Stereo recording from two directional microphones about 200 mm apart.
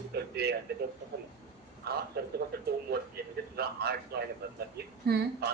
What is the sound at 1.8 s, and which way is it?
A man's voice, 50° right (ahead or behind).